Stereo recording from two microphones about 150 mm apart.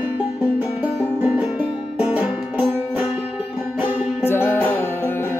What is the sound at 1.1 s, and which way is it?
Music, 10° right (ahead or behind).